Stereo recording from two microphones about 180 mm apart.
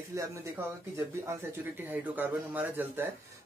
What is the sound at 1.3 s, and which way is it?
Speech, 15° right (ahead or behind).